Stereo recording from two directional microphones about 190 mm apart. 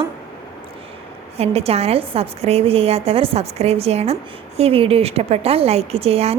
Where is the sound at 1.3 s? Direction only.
35° right (ahead or behind).